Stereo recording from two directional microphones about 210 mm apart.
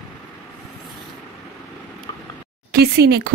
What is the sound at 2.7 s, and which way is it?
Speech, 50° right (ahead or behind).